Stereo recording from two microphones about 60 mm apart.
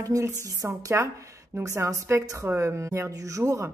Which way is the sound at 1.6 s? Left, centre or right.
Right.